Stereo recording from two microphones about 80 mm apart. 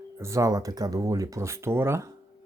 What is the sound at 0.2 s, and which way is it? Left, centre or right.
Speech, right.